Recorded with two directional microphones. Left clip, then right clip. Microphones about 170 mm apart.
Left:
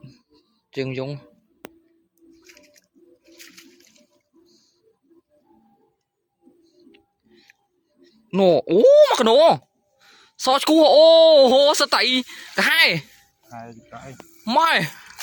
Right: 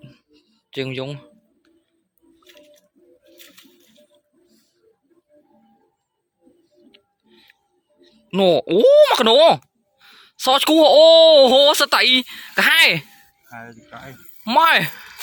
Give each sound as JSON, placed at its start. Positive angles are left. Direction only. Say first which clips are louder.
{"t": 0.7, "sound": "speech", "louder": "right 1 dB", "side_deg": 10}
{"t": 6.9, "sound": "music", "louder": "right 2 dB", "side_deg": 5}
{"t": 8.0, "sound": "speech", "louder": "right 1 dB", "side_deg": 5}
{"t": 13.5, "sound": "speech", "louder": "right 1 dB", "side_deg": 25}
{"t": 13.9, "sound": "speech", "louder": "right 1 dB", "side_deg": 10}